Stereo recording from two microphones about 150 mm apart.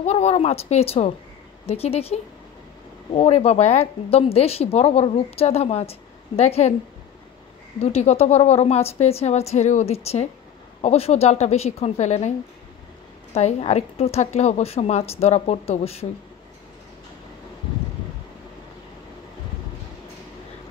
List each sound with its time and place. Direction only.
0.0 s speech: 45° left (ahead or behind)
7.8 s speech: 45° left (ahead or behind)
13.3 s speech: 45° left (ahead or behind)